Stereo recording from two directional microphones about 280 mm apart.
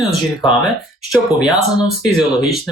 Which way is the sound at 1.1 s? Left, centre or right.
Centre.